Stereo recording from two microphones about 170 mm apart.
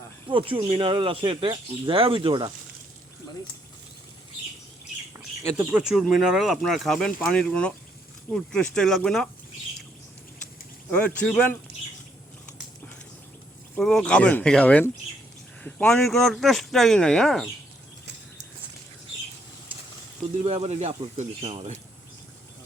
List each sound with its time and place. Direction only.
0.3 s speech: 30° right (ahead or behind)
5.4 s speech: 10° right (ahead or behind)
10.9 s speech: 10° left (ahead or behind)
13.7 s speech: centre (ahead or behind)
20.4 s speech: 35° right (ahead or behind)